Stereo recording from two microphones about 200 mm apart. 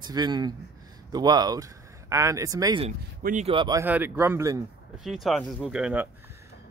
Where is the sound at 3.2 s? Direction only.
40° right (ahead or behind).